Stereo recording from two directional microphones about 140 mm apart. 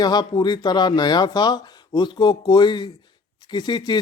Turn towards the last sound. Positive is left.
turn(degrees=30)  # may be behind; listen again after turning